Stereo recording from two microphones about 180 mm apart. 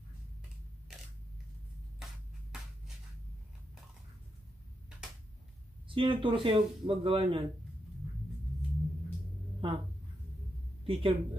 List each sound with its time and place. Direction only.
5.9 s speech: 30° right (ahead or behind)
9.6 s a sound: 30° right (ahead or behind)
10.9 s speech: 30° right (ahead or behind)